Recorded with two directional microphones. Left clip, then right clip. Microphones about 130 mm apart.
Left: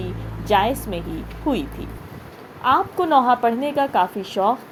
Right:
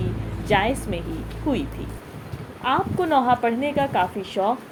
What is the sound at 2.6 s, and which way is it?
Speech, 40° left (ahead or behind).